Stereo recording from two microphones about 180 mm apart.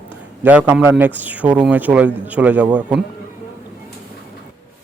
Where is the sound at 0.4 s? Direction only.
10° right (ahead or behind).